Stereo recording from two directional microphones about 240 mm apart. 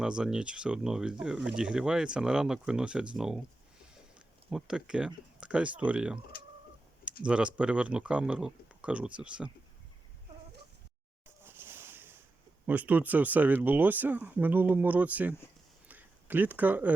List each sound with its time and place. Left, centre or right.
0.0 s speech: centre
4.4 s speech: centre
6.3 s bird: left
7.3 s speech: centre
11.4 s a sound: centre
12.6 s speech: centre
15.9 s a sound: centre